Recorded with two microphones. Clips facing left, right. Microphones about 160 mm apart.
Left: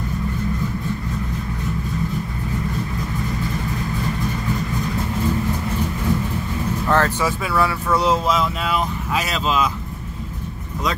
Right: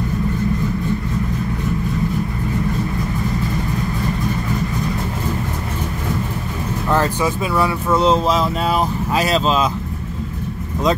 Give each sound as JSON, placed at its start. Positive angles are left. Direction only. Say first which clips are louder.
{"t": 6.9, "sound": "speech", "louder": "right 2 dB", "side_deg": -15}